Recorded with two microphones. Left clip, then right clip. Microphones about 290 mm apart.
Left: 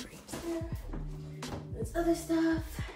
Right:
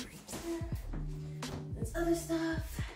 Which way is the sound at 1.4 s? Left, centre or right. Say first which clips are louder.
Left 3 dB; centre.